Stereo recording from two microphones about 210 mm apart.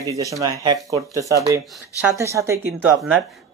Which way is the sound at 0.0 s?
15° right (ahead or behind).